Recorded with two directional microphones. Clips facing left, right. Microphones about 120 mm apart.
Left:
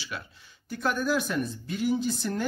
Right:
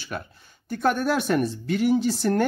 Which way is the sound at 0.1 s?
50° right (ahead or behind).